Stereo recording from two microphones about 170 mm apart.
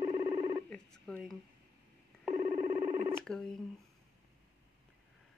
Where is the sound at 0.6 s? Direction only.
5° left (ahead or behind).